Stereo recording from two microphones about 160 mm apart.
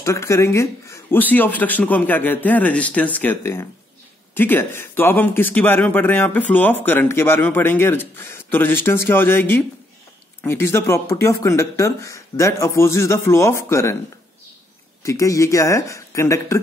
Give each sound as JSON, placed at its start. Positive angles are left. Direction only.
{"t": 0.0, "sound": "speech", "side_deg": 20}
{"t": 15.0, "sound": "speech", "side_deg": 20}